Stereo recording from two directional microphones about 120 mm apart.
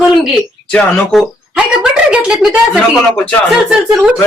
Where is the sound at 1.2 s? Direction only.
5° right (ahead or behind).